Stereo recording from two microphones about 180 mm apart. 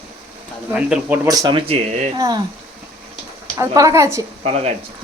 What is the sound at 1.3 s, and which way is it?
Speech, 20° right (ahead or behind).